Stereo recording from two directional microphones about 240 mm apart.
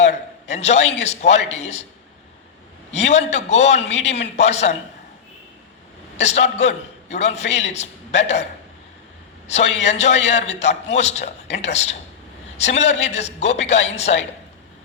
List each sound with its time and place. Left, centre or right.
0.0 s a man's voice: left
2.9 s a man's voice: left
6.1 s a man's voice: left
9.8 s a man's voice: left